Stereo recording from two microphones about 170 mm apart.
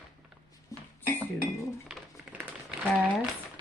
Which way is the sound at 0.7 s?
20° left (ahead or behind).